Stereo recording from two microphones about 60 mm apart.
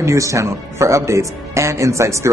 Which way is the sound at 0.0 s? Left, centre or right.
Right.